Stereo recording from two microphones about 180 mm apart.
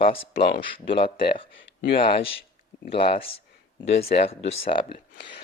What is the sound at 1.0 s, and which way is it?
Speech, 55° left (ahead or behind).